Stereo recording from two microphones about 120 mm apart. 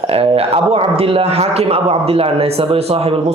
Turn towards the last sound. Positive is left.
turn(degrees=-55)  # may be behind; listen again after turning